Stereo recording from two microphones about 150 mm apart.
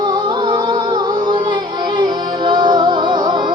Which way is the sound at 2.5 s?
30° right (ahead or behind).